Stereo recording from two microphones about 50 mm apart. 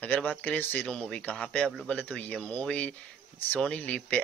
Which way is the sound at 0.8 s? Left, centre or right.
Centre.